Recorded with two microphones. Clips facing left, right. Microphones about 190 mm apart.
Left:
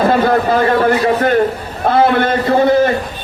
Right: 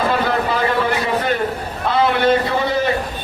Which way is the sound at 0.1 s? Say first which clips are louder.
Left 6 dB; 50° left (ahead or behind).